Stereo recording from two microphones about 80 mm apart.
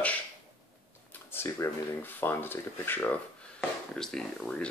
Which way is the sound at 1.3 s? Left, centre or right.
Left.